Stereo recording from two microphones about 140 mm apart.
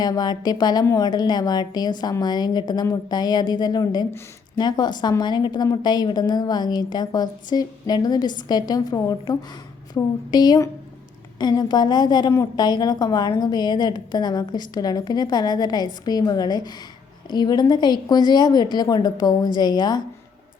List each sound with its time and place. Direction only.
0.0 s a woman's voice: 30° left (ahead or behind)